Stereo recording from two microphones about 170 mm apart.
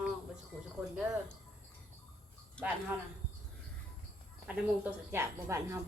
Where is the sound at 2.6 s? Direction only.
5° left (ahead or behind).